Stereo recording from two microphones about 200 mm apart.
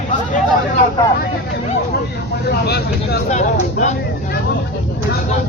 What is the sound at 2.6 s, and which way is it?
Speech, 55° left (ahead or behind).